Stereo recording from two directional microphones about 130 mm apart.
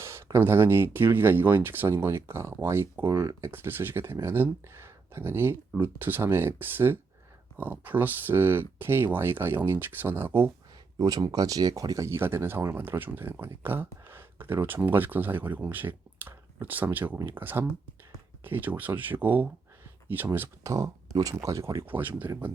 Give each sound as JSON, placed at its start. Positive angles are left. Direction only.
{"t": 0.0, "sound": "speech", "side_deg": -20}
{"t": 10.9, "sound": "speech", "side_deg": -30}